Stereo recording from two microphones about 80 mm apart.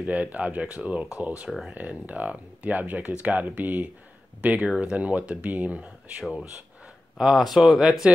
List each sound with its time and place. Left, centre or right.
0.0 s speech: centre
6.2 s speech: centre